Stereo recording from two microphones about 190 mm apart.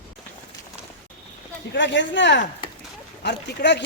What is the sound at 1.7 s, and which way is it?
Speech, 70° left (ahead or behind).